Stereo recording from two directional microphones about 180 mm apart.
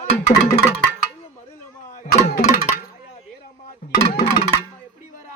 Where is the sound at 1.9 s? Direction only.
45° left (ahead or behind).